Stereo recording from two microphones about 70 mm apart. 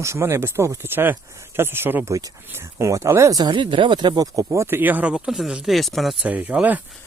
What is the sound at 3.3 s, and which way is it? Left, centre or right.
Speech, right.